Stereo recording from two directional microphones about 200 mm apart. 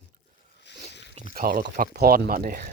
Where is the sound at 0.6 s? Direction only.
60° left (ahead or behind).